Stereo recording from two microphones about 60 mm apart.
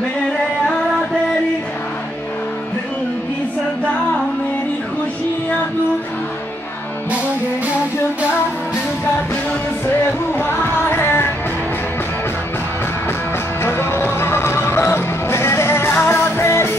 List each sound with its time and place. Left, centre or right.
10.3 s music: left
13.6 s music: left